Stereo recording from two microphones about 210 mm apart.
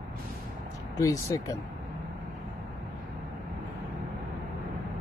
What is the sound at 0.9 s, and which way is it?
Speech, 15° left (ahead or behind).